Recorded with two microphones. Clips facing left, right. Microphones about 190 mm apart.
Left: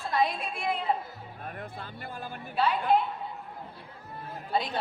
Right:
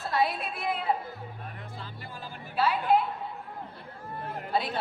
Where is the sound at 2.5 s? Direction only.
5° right (ahead or behind).